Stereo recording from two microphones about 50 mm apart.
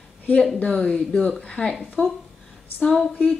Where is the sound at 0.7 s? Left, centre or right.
Centre.